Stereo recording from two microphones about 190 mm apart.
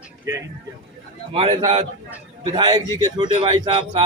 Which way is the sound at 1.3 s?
30° right (ahead or behind).